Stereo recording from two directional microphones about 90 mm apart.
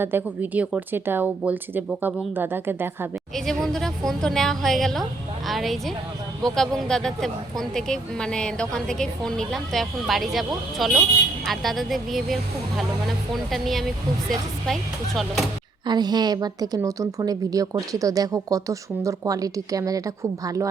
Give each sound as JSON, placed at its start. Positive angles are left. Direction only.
{"t": 0.0, "sound": "speech", "side_deg": -25}
{"t": 3.3, "sound": "speech", "side_deg": 5}
{"t": 15.9, "sound": "a woman's voice", "side_deg": -50}